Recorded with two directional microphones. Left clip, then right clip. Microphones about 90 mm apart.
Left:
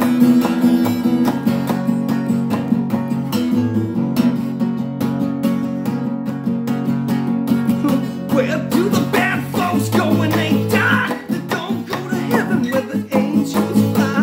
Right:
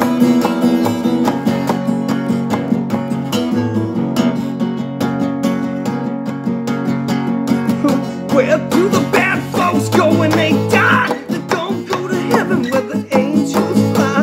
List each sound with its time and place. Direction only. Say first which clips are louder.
0.2 s music: right 1 dB; 25° right (ahead or behind)
8.4 s music: right 5 dB; centre (ahead or behind)
12.7 s music: right 4 dB; 5° right (ahead or behind)